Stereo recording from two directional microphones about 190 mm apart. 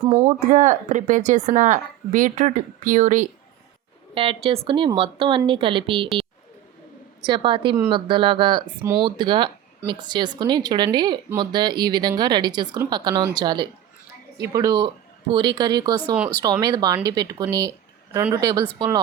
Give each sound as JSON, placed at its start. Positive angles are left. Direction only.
{"t": 0.3, "sound": "speech", "side_deg": -40}
{"t": 4.1, "sound": "a woman's voice", "side_deg": -30}
{"t": 7.3, "sound": "a woman's voice", "side_deg": -25}